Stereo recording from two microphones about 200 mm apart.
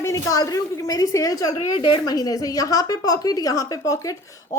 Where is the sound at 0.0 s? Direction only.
15° left (ahead or behind).